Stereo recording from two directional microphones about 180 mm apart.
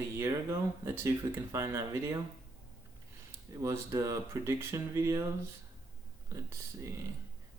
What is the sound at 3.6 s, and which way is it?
Speech, 20° right (ahead or behind).